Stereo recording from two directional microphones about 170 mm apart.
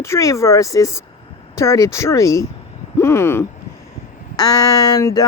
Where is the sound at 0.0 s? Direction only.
15° left (ahead or behind).